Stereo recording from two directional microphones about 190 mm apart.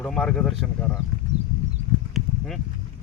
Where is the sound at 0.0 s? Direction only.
5° left (ahead or behind).